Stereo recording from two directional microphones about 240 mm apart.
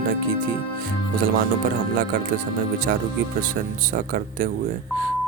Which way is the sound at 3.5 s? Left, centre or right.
Right.